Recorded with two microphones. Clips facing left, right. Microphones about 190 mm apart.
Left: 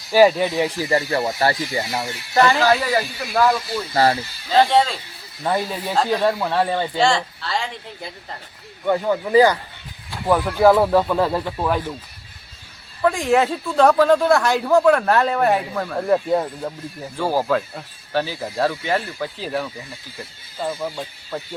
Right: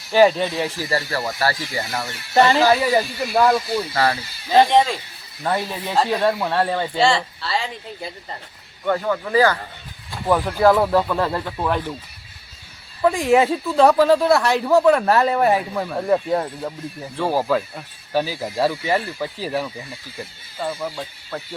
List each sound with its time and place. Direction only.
0.1 s speech: 10° left (ahead or behind)
2.3 s speech: 25° right (ahead or behind)
2.6 s speech: 10° right (ahead or behind)
3.9 s speech: 30° left (ahead or behind)
5.4 s speech: 5° left (ahead or behind)
8.8 s speech: 15° left (ahead or behind)
10.2 s speech: 5° left (ahead or behind)
13.0 s speech: 5° right (ahead or behind)
20.6 s speech: 5° left (ahead or behind)